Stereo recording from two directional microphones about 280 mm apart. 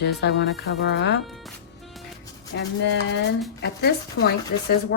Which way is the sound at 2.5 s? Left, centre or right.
Left.